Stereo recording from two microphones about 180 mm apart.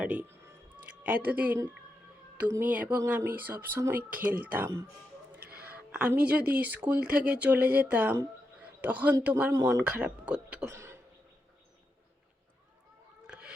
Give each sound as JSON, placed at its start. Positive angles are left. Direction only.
{"t": 0.0, "sound": "music", "side_deg": -10}
{"t": 1.0, "sound": "speech", "side_deg": -10}
{"t": 4.3, "sound": "speech", "side_deg": -50}
{"t": 4.5, "sound": "speech", "side_deg": -10}
{"t": 13.2, "sound": "a sound", "side_deg": -5}